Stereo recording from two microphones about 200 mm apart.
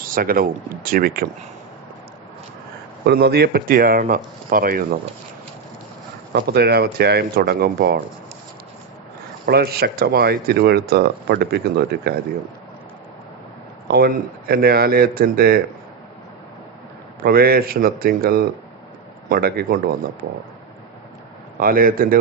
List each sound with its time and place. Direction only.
0.0 s speech: 45° right (ahead or behind)
3.1 s speech: 55° right (ahead or behind)
6.3 s speech: 55° right (ahead or behind)
9.5 s speech: 50° right (ahead or behind)
13.8 s speech: 50° right (ahead or behind)
17.2 s speech: 50° right (ahead or behind)
21.6 s speech: 45° right (ahead or behind)